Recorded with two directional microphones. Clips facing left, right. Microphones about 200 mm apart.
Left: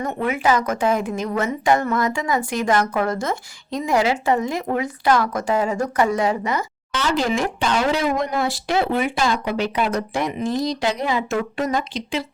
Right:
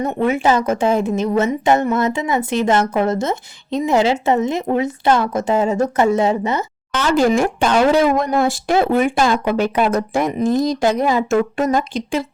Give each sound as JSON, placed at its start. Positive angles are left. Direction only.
{"t": 0.0, "sound": "a woman's voice", "side_deg": -25}
{"t": 6.9, "sound": "speech", "side_deg": -50}